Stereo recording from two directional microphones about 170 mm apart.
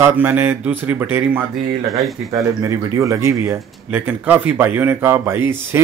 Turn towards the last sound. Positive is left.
turn(degrees=-10)  # may be behind; listen again after turning